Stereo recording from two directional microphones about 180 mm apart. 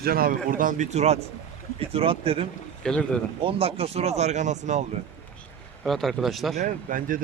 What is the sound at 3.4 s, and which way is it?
Speech, 30° right (ahead or behind).